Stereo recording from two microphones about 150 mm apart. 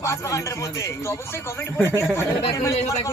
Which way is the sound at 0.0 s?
20° left (ahead or behind).